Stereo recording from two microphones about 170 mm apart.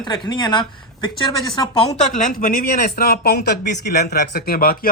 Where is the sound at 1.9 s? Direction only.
45° left (ahead or behind).